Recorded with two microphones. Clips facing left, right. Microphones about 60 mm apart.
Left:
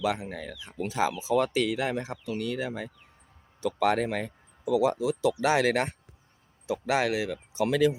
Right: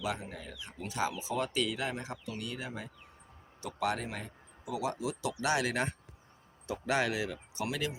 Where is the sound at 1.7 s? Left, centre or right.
Left.